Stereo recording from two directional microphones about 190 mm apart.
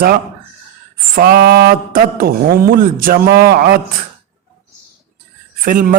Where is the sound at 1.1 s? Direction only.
55° right (ahead or behind).